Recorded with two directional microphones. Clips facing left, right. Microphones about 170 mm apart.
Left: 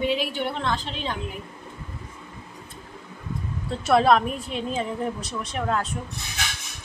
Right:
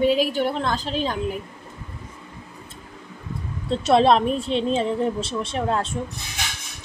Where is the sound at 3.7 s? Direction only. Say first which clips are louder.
Right 2 dB; 25° right (ahead or behind).